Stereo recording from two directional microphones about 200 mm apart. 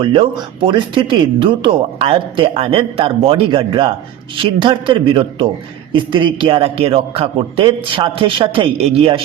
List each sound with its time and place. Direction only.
0.0 s speech: 25° right (ahead or behind)